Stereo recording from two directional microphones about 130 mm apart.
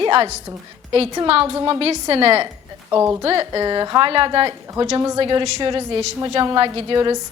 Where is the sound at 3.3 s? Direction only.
30° right (ahead or behind).